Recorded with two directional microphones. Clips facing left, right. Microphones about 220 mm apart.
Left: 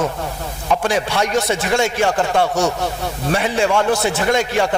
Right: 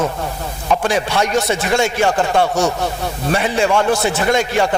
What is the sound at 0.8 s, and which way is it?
A man's voice, 15° right (ahead or behind).